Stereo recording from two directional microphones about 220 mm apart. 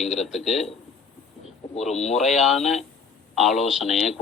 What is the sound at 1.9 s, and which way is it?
Speech, 30° left (ahead or behind).